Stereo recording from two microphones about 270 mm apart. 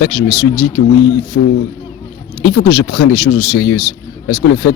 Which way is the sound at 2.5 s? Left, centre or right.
Left.